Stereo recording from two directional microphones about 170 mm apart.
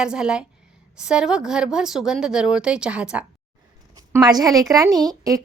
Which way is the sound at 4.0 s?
25° right (ahead or behind).